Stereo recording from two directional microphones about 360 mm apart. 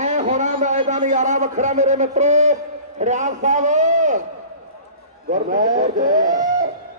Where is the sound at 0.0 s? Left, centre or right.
Centre.